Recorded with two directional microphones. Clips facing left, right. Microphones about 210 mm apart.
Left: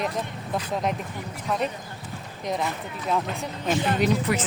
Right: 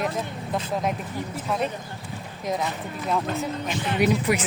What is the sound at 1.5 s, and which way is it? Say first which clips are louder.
Speech: even; centre (ahead or behind).